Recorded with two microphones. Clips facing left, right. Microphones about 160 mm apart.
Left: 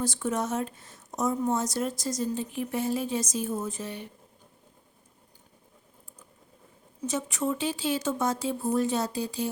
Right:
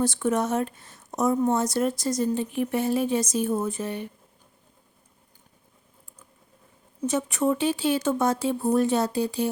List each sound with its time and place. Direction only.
0.0 s speech: 65° right (ahead or behind)
7.1 s speech: 60° right (ahead or behind)